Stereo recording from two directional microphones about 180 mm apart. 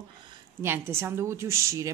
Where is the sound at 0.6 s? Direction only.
15° right (ahead or behind).